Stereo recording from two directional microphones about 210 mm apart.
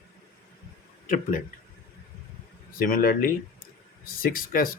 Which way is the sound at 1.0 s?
40° left (ahead or behind).